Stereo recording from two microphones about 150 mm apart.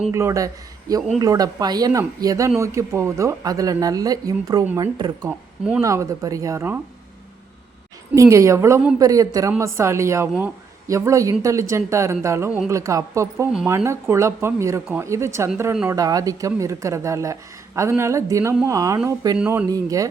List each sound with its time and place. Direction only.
0.1 s speech: 20° right (ahead or behind)
8.1 s speech: 20° right (ahead or behind)
19.4 s speech: 10° right (ahead or behind)
19.6 s speech: 25° right (ahead or behind)